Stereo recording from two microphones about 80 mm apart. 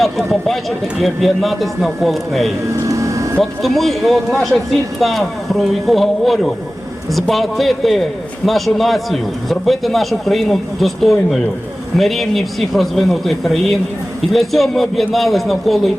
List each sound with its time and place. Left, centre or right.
0.0 s a man's voice: centre
2.8 s a sound: right
3.6 s a man's voice: centre